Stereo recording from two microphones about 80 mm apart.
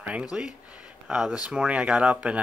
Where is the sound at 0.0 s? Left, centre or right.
Centre.